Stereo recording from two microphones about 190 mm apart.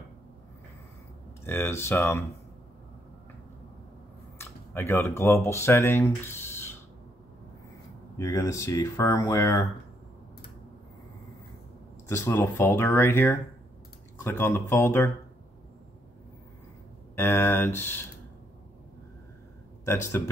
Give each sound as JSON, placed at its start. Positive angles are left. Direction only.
{"t": 1.4, "sound": "speech", "side_deg": 15}
{"t": 4.4, "sound": "speech", "side_deg": 10}
{"t": 8.2, "sound": "speech", "side_deg": 15}
{"t": 12.1, "sound": "speech", "side_deg": 10}
{"t": 17.1, "sound": "speech", "side_deg": 10}
{"t": 19.8, "sound": "speech", "side_deg": 15}